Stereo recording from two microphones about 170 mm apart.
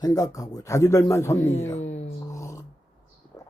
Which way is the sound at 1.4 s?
40° left (ahead or behind).